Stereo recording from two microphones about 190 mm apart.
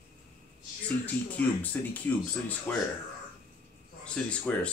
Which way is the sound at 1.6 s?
10° left (ahead or behind).